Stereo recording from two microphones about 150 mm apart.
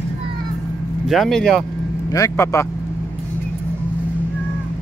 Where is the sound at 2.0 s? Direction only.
20° left (ahead or behind).